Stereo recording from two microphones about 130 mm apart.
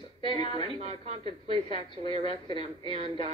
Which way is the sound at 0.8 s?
55° right (ahead or behind).